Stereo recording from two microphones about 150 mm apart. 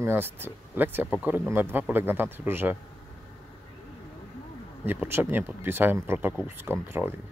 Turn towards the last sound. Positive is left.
turn(degrees=-15)  # may be behind; listen again after turning